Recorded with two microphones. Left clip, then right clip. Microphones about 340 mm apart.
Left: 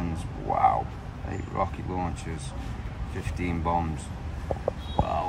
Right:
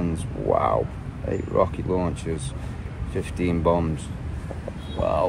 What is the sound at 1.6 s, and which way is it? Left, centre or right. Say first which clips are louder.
Speech: right 7 dB; centre.